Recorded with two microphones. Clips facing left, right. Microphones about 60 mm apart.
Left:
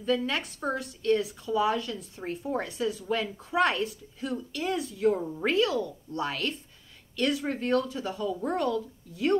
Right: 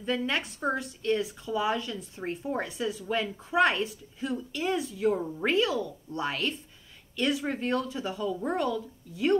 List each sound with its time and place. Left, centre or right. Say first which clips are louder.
0.0 s a woman's voice: left 1 dB; centre